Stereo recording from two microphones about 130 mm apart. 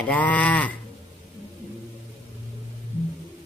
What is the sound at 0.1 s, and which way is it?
Speech, 10° left (ahead or behind).